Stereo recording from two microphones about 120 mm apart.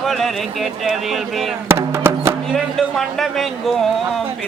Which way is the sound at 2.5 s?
Centre (ahead or behind).